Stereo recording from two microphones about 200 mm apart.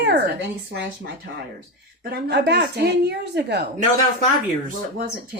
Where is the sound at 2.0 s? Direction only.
55° right (ahead or behind).